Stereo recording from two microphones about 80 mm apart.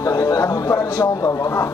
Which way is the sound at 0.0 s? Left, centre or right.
Left.